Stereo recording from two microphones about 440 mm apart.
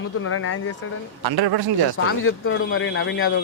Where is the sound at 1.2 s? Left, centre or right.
Right.